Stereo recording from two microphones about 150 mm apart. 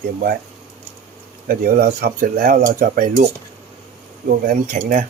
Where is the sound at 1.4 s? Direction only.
75° right (ahead or behind).